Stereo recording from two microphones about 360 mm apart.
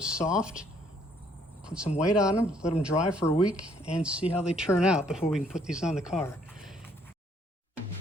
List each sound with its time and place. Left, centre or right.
0.0 s speech: centre